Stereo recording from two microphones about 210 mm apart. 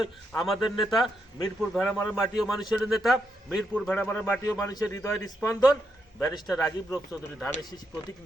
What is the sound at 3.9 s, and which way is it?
Speech, 10° left (ahead or behind).